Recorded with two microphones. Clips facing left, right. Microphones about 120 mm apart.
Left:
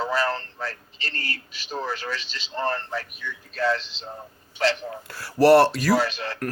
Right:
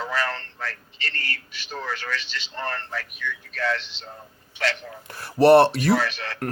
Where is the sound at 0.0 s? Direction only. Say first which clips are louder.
Left 3 dB; 30° left (ahead or behind).